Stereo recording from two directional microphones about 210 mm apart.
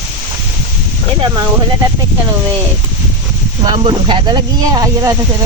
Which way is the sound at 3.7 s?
20° right (ahead or behind).